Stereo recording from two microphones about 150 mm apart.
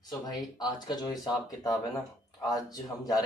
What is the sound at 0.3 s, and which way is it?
Speech, 25° left (ahead or behind).